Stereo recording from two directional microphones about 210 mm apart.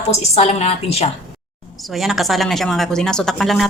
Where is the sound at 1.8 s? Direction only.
Centre (ahead or behind).